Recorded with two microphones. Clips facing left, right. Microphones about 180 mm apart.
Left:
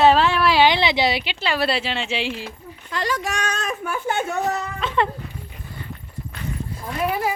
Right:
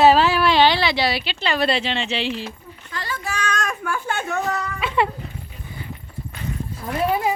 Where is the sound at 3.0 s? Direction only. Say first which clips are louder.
Left 7 dB; 90° left.